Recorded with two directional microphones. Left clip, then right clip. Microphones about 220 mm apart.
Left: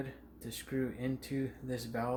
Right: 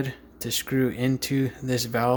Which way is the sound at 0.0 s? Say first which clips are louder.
Right 12 dB; 50° right (ahead or behind).